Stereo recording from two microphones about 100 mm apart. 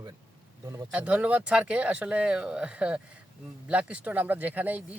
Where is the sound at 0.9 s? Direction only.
15° right (ahead or behind).